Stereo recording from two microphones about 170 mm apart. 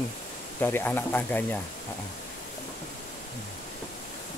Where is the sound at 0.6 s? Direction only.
15° left (ahead or behind).